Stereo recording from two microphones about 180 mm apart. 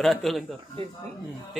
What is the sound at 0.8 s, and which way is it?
Speech, 30° right (ahead or behind).